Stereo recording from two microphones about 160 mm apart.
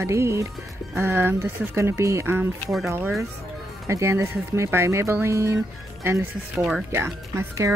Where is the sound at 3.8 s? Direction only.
20° right (ahead or behind).